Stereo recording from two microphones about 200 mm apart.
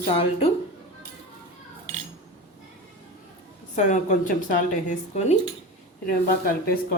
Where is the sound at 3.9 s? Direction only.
40° left (ahead or behind).